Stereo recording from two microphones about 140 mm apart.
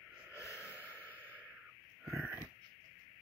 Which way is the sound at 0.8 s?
15° left (ahead or behind).